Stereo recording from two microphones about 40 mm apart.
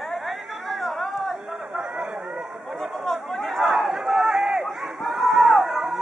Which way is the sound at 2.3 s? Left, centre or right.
Centre.